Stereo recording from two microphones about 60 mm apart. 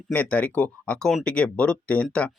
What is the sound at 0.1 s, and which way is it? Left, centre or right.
Speech, left.